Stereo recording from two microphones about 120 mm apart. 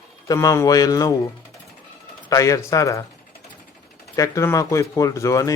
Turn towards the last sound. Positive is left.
turn(degrees=25)  # may be behind; listen again after turning